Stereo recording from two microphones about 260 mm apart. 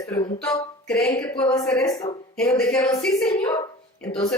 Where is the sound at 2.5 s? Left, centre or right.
Centre.